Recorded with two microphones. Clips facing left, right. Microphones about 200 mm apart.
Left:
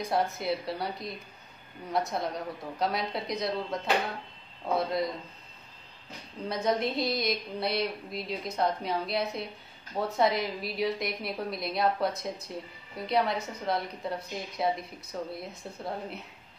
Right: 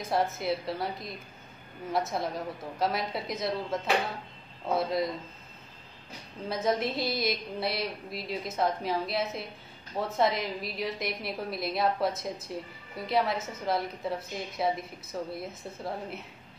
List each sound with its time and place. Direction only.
0.0 s a woman's voice: centre (ahead or behind)
6.5 s a woman's voice: centre (ahead or behind)